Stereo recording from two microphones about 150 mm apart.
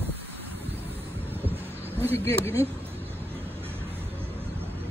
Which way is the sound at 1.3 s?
15° right (ahead or behind).